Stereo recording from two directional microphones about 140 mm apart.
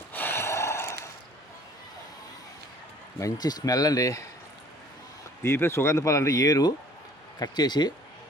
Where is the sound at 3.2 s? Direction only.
30° left (ahead or behind).